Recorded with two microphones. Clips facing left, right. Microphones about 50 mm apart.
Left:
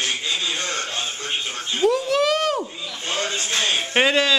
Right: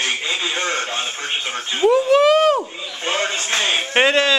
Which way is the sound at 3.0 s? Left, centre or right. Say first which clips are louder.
Right 4 dB; right.